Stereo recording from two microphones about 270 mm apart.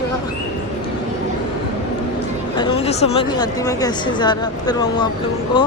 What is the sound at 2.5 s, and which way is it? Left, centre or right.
Speech, centre.